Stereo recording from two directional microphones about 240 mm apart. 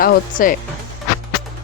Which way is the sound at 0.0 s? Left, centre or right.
Left.